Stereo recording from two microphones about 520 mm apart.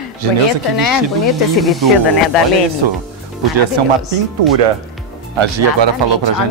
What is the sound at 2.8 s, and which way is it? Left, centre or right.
Speech, right.